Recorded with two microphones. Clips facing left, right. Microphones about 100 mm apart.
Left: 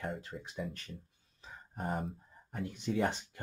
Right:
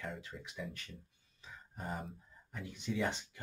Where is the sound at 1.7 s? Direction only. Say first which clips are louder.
Left 6 dB; 50° left (ahead or behind).